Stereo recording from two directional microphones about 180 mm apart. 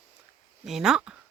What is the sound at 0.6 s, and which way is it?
Speech, centre (ahead or behind).